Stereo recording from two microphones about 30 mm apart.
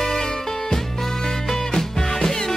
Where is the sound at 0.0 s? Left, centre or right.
Centre.